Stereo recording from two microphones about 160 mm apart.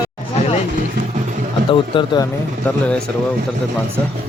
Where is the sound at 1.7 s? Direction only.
30° left (ahead or behind).